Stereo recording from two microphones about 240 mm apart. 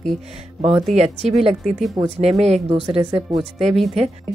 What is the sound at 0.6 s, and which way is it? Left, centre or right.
A woman's voice, right.